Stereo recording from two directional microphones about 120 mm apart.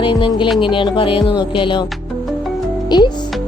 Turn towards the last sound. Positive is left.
turn(degrees=40)  # may be behind; listen again after turning